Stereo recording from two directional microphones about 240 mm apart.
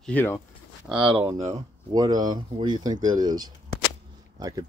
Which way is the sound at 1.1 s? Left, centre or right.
Right.